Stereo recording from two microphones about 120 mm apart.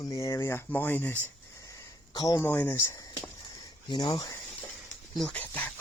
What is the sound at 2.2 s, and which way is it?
Speech, 35° left (ahead or behind).